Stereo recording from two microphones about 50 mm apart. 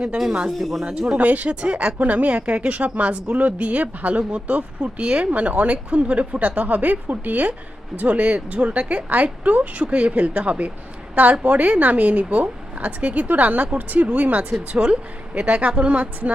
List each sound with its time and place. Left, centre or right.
0.6 s speech: centre
0.9 s a woman's voice: right
14.8 s speech: centre
15.4 s speech: right